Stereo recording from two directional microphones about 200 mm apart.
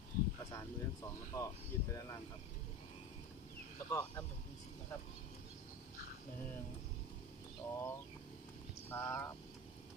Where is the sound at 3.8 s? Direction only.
15° left (ahead or behind).